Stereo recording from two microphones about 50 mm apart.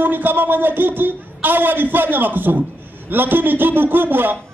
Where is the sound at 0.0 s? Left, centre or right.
Right.